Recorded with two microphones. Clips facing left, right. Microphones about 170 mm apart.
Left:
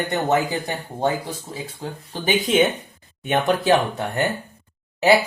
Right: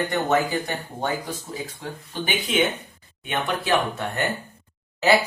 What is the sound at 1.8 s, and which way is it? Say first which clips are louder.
Speech: left 2 dB; 40° left (ahead or behind).